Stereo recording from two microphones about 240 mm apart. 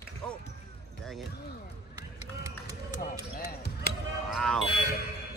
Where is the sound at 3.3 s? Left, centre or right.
Left.